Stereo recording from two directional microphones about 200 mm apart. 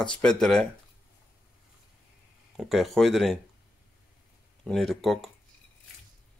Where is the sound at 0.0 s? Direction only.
5° left (ahead or behind).